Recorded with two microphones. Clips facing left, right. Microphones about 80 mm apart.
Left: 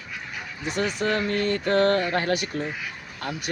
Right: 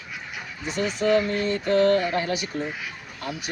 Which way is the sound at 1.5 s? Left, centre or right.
Left.